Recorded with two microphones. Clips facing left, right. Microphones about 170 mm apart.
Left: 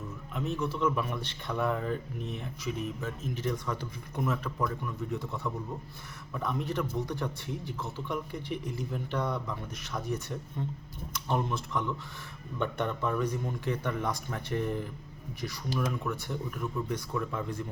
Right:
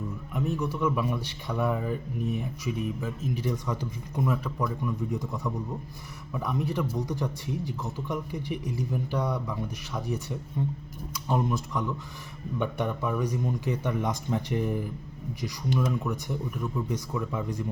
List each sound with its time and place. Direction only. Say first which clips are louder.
0.3 s a man's voice: right 2 dB; 10° right (ahead or behind)